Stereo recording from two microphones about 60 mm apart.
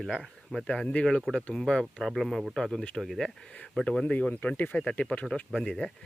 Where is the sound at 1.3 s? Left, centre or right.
Centre.